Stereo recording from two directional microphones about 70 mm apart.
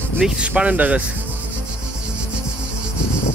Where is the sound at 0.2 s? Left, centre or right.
Centre.